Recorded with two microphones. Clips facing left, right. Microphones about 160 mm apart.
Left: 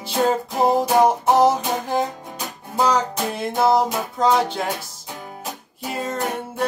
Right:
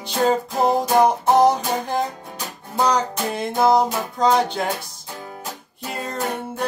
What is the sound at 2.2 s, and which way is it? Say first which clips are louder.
Music: left 1 dB; 15° left (ahead or behind).